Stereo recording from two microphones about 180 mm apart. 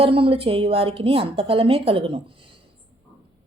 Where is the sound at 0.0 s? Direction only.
30° right (ahead or behind).